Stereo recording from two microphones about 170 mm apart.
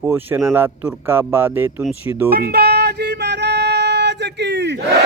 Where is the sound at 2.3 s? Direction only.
65° right (ahead or behind).